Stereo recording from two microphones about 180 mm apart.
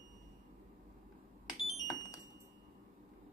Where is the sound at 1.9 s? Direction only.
20° left (ahead or behind).